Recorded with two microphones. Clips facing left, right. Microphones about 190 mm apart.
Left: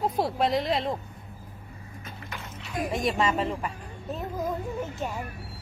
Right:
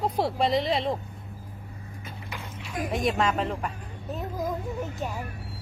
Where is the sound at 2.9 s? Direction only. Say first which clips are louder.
Right 1 dB; centre (ahead or behind).